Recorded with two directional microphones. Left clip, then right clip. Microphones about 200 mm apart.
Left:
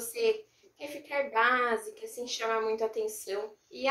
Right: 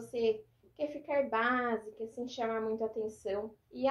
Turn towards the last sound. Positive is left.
turn(degrees=25)  # may be behind; listen again after turning